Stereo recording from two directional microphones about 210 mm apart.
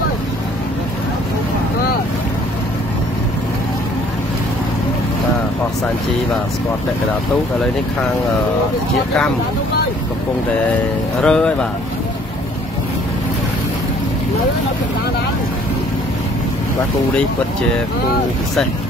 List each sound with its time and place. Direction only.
11.1 s speech: 5° left (ahead or behind)